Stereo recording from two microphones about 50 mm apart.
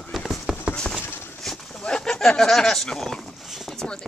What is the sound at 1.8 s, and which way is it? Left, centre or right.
Speech, centre.